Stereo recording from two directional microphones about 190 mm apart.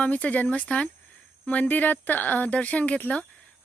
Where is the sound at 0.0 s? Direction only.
5° left (ahead or behind).